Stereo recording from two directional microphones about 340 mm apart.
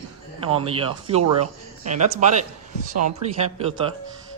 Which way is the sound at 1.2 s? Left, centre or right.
Right.